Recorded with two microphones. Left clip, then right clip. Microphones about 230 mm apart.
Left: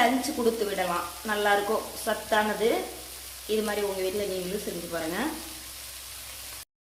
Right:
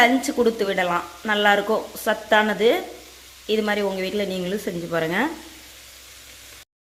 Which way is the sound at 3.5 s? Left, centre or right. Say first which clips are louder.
Right 6 dB; right.